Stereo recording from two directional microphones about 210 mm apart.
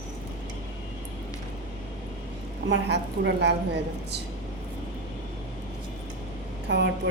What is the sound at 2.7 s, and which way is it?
Speech, 55° right (ahead or behind).